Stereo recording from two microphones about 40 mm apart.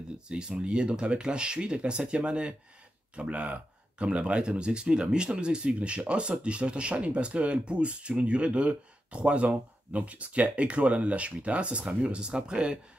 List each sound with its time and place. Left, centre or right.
0.3 s speech: right